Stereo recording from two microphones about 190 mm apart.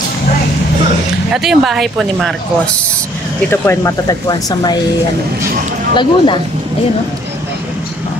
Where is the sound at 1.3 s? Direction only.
Centre (ahead or behind).